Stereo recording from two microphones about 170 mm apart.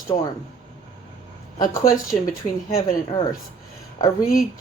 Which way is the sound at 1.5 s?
20° left (ahead or behind).